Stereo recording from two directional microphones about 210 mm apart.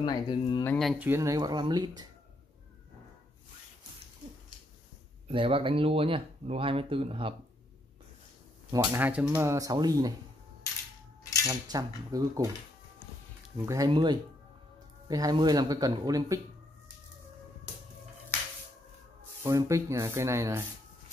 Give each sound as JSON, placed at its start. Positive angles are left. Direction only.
{"t": 0.0, "sound": "speech", "side_deg": 20}
{"t": 0.7, "sound": "speech", "side_deg": 0}
{"t": 1.0, "sound": "speech", "side_deg": -15}
{"t": 5.3, "sound": "speech", "side_deg": -25}
{"t": 8.7, "sound": "speech", "side_deg": -15}
{"t": 11.4, "sound": "speech", "side_deg": -15}
{"t": 13.7, "sound": "speech", "side_deg": -20}
{"t": 19.4, "sound": "speech", "side_deg": -15}